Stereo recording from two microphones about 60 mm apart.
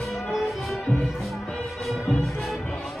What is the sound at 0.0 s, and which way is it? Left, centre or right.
Music, centre.